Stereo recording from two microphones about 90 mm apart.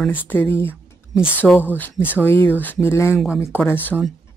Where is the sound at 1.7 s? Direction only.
20° left (ahead or behind).